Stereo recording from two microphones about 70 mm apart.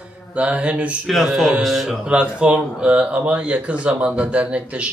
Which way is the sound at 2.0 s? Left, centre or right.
Centre.